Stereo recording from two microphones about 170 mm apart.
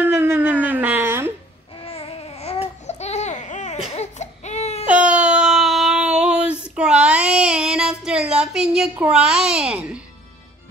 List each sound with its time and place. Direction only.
0.0 s a sound: 15° right (ahead or behind)
1.9 s babbling: 35° left (ahead or behind)
3.9 s baby cry: 40° left (ahead or behind)
4.8 s a sound: 5° right (ahead or behind)
6.7 s child singing: 5° right (ahead or behind)
7.7 s a child's voice: 5° right (ahead or behind)